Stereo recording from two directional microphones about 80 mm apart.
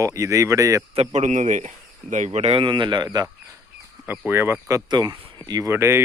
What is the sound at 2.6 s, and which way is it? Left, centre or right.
Speech, right.